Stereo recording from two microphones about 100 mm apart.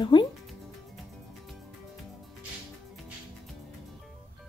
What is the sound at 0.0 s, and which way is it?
Music, 50° left (ahead or behind).